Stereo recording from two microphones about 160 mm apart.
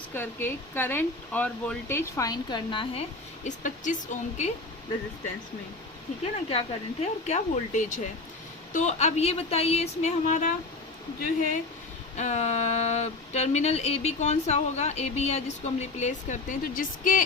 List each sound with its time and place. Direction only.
0.1 s speech: 15° left (ahead or behind); by 3.0 s 30° left (ahead or behind)
3.4 s speech: 50° left (ahead or behind)
6.5 s speech: 40° left (ahead or behind)
12.1 s speech: 45° left (ahead or behind)